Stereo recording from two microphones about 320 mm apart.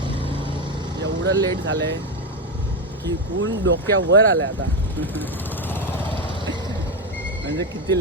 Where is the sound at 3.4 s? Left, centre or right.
Right.